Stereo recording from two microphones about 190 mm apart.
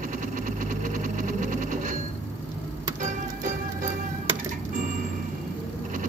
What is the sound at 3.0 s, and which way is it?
Music, 40° right (ahead or behind).